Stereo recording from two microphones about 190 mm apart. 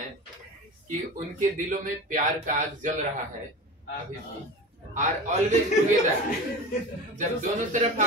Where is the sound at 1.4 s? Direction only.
40° right (ahead or behind).